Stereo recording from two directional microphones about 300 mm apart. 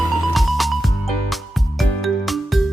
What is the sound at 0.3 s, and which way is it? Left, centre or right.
Music, centre.